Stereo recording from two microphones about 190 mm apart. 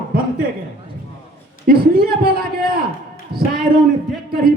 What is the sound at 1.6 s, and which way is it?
A man's voice, 55° right (ahead or behind).